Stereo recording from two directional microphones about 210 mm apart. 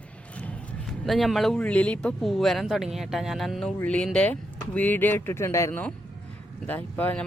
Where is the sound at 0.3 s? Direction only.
5° left (ahead or behind).